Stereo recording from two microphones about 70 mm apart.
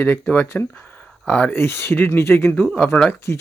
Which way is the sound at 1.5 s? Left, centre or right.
Left.